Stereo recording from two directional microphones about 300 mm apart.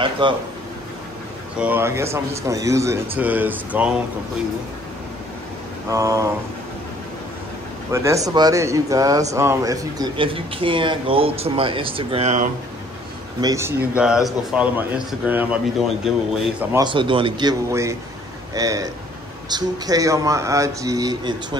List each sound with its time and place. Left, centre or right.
0.2 s speech: centre
1.6 s speech: centre
5.9 s speech: centre
7.9 s speech: centre
13.4 s speech: centre
16.7 s speech: centre